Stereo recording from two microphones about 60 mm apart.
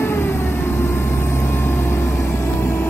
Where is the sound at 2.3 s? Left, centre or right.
Left.